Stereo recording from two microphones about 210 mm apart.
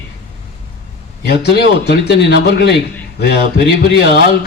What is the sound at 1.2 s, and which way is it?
A man's voice, 50° left (ahead or behind).